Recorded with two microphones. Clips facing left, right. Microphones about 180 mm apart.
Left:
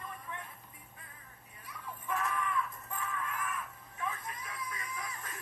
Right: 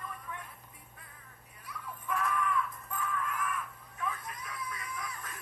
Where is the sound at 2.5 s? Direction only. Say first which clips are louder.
Right 2 dB; 10° left (ahead or behind).